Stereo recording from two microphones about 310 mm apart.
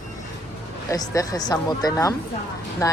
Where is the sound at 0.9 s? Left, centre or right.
Centre.